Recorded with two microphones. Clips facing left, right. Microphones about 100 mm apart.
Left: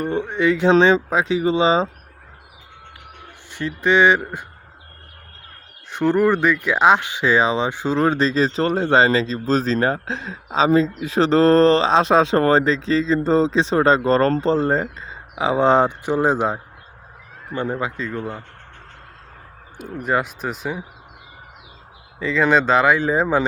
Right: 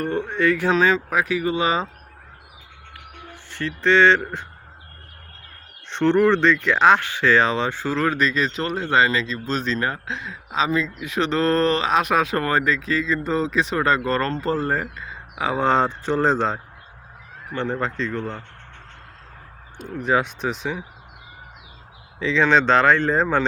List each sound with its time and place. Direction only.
0.0 s speech: 15° left (ahead or behind)
3.5 s speech: 15° left (ahead or behind)
5.9 s speech: 5° left (ahead or behind)
19.7 s speech: 5° left (ahead or behind)
22.2 s speech: 5° left (ahead or behind)